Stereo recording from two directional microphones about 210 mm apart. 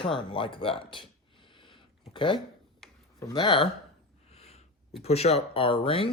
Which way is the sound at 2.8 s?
Centre (ahead or behind).